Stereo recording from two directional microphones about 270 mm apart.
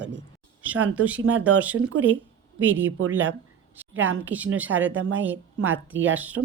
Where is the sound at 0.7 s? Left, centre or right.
Centre.